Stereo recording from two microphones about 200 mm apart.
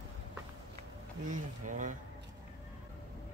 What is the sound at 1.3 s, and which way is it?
Speech, 40° right (ahead or behind).